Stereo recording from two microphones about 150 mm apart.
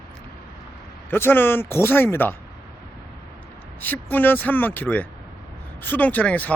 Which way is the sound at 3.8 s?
10° left (ahead or behind).